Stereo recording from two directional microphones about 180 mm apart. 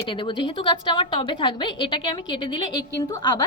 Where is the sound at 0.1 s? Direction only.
25° left (ahead or behind).